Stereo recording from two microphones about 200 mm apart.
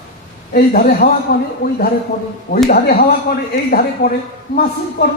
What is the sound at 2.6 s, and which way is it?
A man's voice, 50° left (ahead or behind).